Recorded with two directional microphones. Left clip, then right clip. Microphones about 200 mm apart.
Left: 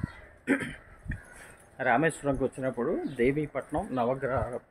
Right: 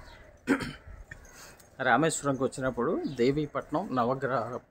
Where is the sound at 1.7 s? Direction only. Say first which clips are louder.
Even; 10° right (ahead or behind).